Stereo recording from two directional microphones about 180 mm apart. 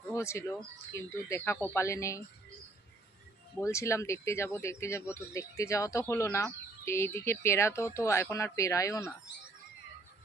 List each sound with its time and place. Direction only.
0.1 s speech: 15° left (ahead or behind)
3.6 s speech: 15° left (ahead or behind)